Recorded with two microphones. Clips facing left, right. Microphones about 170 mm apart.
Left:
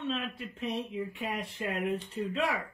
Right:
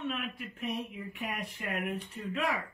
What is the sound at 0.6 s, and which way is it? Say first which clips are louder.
Speech: left 3 dB; 30° left (ahead or behind).